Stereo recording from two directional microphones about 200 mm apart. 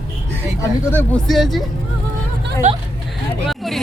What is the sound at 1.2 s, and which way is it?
Speech, centre (ahead or behind).